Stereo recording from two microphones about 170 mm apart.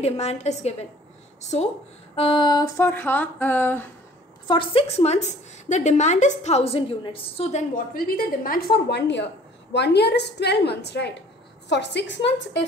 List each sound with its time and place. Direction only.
0.0 s a woman's voice: 40° left (ahead or behind)
2.1 s a sound: 30° left (ahead or behind); by 3.9 s 10° left (ahead or behind)
4.5 s a woman's voice: 30° left (ahead or behind)
7.7 s a woman's voice: 55° left (ahead or behind); by 12.6 s 90° left